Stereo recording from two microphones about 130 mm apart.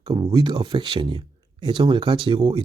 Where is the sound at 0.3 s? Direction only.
35° right (ahead or behind).